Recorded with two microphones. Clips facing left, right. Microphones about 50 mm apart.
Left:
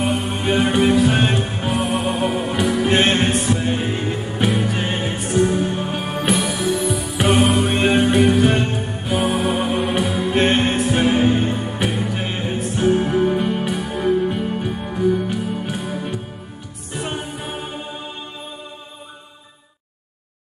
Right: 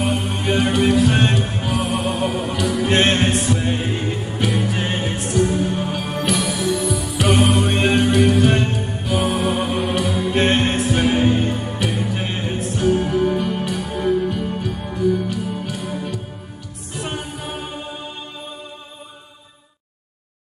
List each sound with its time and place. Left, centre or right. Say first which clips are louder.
0.0 s music: left 1 dB; centre
14.2 s music: left 1 dB; centre
15.8 s music: left 1 dB; centre